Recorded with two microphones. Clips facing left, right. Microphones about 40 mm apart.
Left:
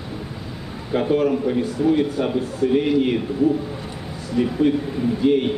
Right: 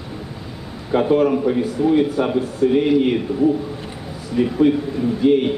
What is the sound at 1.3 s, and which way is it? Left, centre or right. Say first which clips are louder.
Speech: right 3 dB; right.